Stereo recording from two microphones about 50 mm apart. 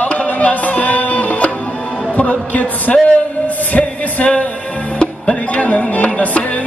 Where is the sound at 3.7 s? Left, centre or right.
Left.